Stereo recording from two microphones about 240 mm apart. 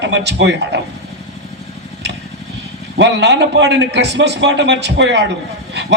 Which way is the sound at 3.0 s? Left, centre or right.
Right.